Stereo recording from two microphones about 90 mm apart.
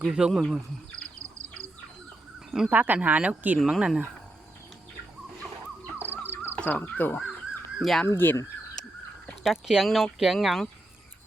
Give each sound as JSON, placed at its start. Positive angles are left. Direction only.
{"t": 0.0, "sound": "speech", "side_deg": -5}
{"t": 2.6, "sound": "speech", "side_deg": -20}
{"t": 6.0, "sound": "music", "side_deg": -20}
{"t": 6.4, "sound": "a sound", "side_deg": -20}
{"t": 6.7, "sound": "speech", "side_deg": 20}
{"t": 7.8, "sound": "speech", "side_deg": 0}
{"t": 8.0, "sound": "speech", "side_deg": 25}
{"t": 8.8, "sound": "a sound", "side_deg": 5}
{"t": 9.4, "sound": "speech", "side_deg": -5}